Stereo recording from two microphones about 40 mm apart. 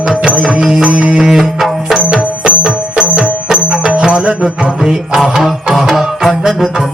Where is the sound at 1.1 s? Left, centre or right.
Centre.